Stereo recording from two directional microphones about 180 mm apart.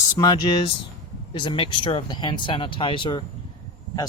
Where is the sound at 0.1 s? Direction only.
20° left (ahead or behind).